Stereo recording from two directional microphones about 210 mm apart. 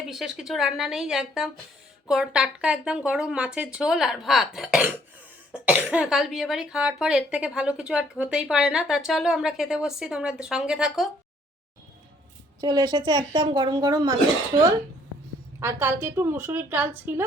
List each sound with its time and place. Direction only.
0.1 s speech: centre (ahead or behind)
12.5 s a woman's voice: 20° right (ahead or behind)